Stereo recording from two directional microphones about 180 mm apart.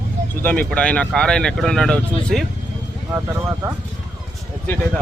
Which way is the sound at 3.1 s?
15° right (ahead or behind).